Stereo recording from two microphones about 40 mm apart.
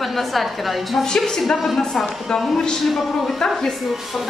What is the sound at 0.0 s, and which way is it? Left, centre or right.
A woman's voice, centre.